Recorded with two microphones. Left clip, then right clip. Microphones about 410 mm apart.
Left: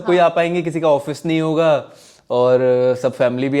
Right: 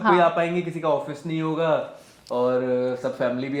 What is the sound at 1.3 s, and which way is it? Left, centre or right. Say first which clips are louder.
Speech: left 8 dB; left.